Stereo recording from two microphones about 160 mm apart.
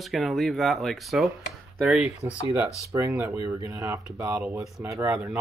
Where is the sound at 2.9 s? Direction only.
20° right (ahead or behind).